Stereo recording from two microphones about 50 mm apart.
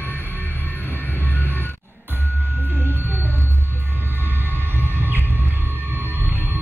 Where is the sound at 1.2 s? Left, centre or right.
Left.